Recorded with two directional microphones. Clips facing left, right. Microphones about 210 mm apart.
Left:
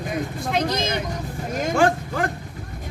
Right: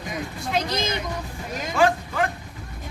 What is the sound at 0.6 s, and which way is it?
Vehicle, 55° left (ahead or behind).